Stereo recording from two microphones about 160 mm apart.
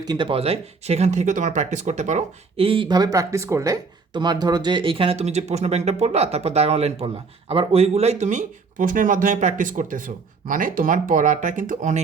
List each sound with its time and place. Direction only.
0.0 s speech: 25° right (ahead or behind); by 11.9 s 55° right (ahead or behind)